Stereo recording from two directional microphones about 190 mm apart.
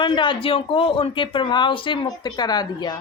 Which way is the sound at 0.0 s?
25° left (ahead or behind).